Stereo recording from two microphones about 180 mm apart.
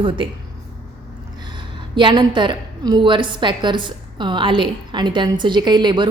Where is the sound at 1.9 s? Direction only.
25° right (ahead or behind).